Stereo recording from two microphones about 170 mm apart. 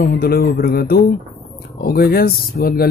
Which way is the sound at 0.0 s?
65° left (ahead or behind).